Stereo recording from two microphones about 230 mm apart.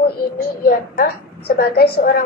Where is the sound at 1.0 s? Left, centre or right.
Left.